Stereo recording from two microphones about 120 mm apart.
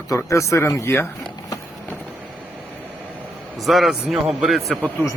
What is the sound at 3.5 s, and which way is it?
Speech, centre (ahead or behind).